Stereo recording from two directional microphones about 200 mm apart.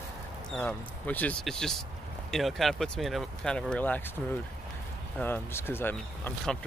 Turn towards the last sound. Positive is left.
turn(degrees=10)  # may be behind; listen again after turning